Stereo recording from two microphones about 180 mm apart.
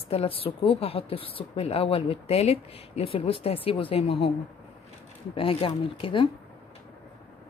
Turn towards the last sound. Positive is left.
turn(degrees=30)  # may be behind; listen again after turning